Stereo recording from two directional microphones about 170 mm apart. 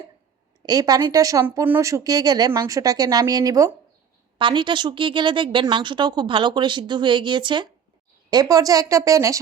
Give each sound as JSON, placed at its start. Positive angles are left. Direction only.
{"t": 0.6, "sound": "speech", "side_deg": -25}